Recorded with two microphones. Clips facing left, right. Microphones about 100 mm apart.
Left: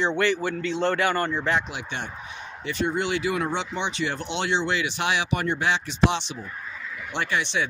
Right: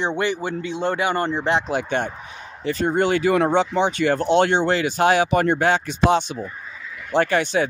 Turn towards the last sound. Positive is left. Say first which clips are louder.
# right 7 dB
turn(degrees=-45)  # may be behind; listen again after turning